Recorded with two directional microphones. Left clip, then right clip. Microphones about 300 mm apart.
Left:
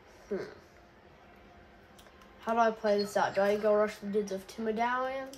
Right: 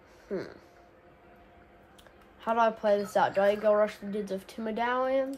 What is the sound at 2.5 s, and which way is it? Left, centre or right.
Speech, right.